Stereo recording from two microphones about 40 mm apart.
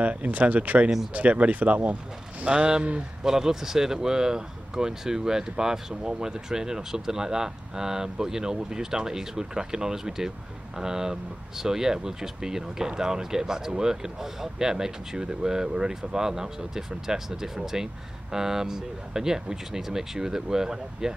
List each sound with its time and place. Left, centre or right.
0.0 s speech: right
2.4 s speech: right
3.3 s speech: centre